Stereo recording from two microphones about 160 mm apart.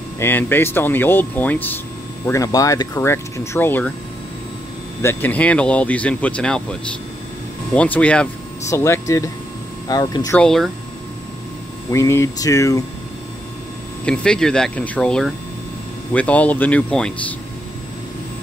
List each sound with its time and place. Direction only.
0.2 s speech: 10° left (ahead or behind)
5.0 s speech: 10° left (ahead or behind)
10.3 s speech: 5° left (ahead or behind)
11.9 s speech: 20° left (ahead or behind)
14.0 s speech: 5° left (ahead or behind)